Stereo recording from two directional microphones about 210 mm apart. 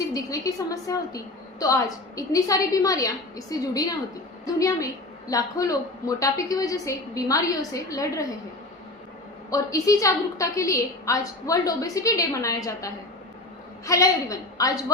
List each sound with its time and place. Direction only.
0.1 s a woman's voice: 15° left (ahead or behind)
9.5 s a woman's voice: 15° left (ahead or behind)